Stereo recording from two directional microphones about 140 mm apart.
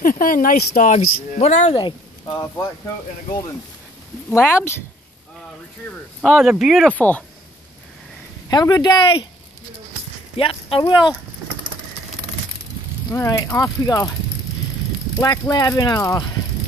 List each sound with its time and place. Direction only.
0.0 s speech: 85° left
1.4 s speech: 55° left (ahead or behind)
2.2 s speech: 15° left (ahead or behind)
4.3 s speech: 15° left (ahead or behind)
6.2 s speech: centre (ahead or behind)
7.0 s speech: 10° left (ahead or behind)
8.5 s speech: 30° left (ahead or behind)
10.3 s speech: 45° left (ahead or behind)
13.1 s speech: 20° left (ahead or behind)
15.1 s speech: 25° left (ahead or behind)